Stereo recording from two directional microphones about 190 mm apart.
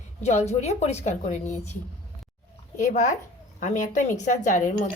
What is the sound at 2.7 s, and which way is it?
A woman's voice, 40° left (ahead or behind).